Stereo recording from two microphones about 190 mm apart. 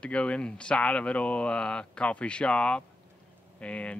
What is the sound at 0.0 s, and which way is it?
Speech, 5° left (ahead or behind).